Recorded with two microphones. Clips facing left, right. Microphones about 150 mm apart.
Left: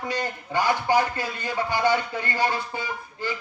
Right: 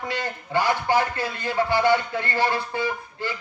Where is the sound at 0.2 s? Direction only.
15° left (ahead or behind).